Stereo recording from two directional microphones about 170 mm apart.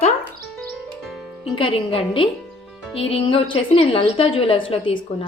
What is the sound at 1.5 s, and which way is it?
A woman's voice, 30° left (ahead or behind).